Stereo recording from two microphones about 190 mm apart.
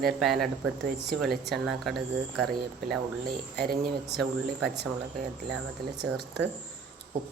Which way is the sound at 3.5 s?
55° right (ahead or behind).